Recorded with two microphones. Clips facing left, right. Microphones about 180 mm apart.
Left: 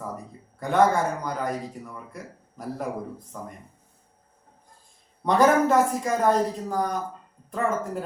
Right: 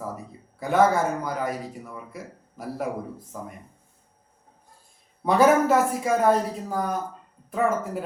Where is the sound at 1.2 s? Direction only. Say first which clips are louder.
Even; 5° right (ahead or behind).